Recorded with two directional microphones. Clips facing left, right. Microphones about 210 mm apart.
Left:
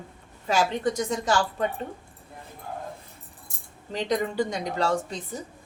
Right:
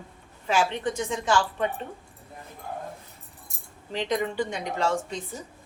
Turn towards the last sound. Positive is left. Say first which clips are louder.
# left 1 dB
turn(degrees=35)  # may be behind; listen again after turning